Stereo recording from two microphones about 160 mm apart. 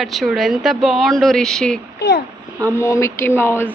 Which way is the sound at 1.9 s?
90° left.